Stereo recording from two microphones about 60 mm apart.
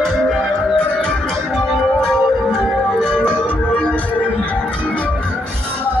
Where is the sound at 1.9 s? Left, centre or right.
Centre; by 4.3 s left.